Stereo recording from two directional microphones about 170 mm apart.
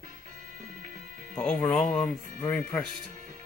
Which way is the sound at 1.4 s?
5° left (ahead or behind).